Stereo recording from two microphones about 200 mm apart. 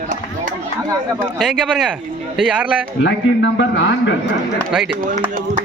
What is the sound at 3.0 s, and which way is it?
A man's voice, 70° left (ahead or behind).